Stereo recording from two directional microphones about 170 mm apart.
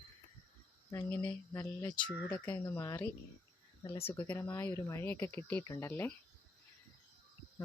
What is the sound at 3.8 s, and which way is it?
Speech, 30° left (ahead or behind).